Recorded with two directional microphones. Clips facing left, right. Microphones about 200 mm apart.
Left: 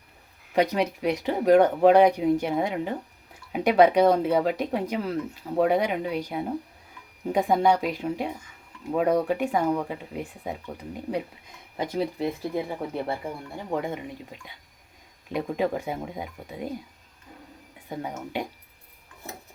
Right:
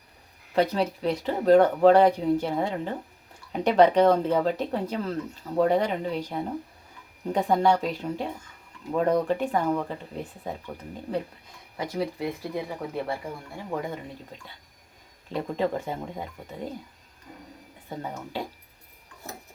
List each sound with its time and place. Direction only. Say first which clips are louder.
0.5 s speech: left 1 dB; 15° left (ahead or behind)
11.8 s speech: left 2 dB; 25° left (ahead or behind)
13.7 s speech: left 2 dB; 20° left (ahead or behind)
17.8 s speech: left 2 dB; 15° left (ahead or behind)